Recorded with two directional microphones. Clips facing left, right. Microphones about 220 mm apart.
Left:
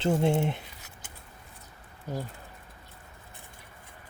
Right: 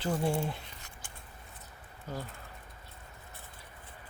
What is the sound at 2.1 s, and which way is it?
Speech, 10° left (ahead or behind).